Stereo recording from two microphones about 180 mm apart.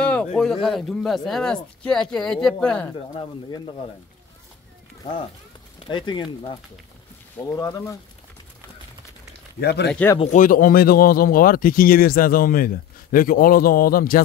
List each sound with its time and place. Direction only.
0.0 s speech: 5° left (ahead or behind)
3.2 s speech: 25° left (ahead or behind)
5.9 s speech: 25° left (ahead or behind)
9.6 s speech: 65° left (ahead or behind)
10.1 s speech: 40° left (ahead or behind)